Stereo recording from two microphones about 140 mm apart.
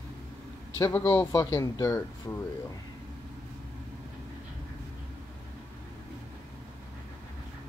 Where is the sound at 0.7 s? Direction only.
20° left (ahead or behind).